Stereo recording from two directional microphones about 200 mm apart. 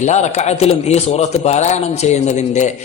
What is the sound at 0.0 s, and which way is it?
A man's voice, 35° left (ahead or behind).